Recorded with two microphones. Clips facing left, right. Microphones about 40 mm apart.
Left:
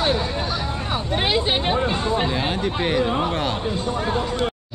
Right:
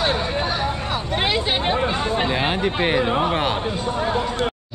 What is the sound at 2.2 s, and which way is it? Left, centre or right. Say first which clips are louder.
Speech: right 2 dB; right.